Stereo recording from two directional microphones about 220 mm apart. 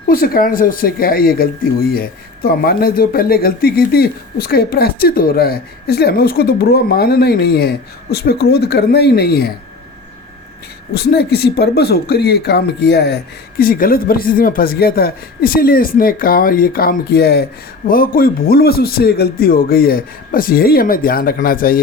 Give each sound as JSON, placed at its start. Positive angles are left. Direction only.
{"t": 0.1, "sound": "speech", "side_deg": 40}
{"t": 10.9, "sound": "a man's voice", "side_deg": 45}